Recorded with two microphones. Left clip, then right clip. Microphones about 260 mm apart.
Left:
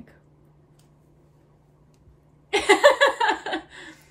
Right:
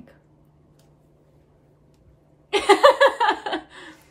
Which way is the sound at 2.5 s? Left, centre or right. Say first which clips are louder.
Right 2 dB; centre.